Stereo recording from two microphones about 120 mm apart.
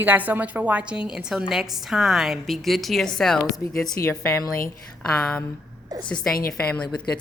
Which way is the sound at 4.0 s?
20° left (ahead or behind).